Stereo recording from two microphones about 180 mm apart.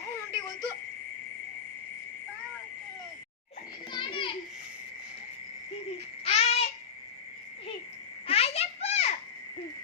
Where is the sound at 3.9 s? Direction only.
25° left (ahead or behind).